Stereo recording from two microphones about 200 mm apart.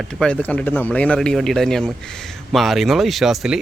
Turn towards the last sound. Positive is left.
turn(degrees=0)  # may be behind; listen again after turning